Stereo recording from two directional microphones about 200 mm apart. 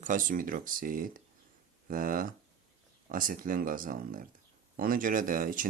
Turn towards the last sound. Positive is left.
turn(degrees=-45)  # may be behind; listen again after turning